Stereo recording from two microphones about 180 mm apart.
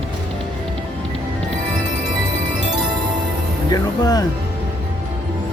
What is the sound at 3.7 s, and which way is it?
Music, 20° left (ahead or behind).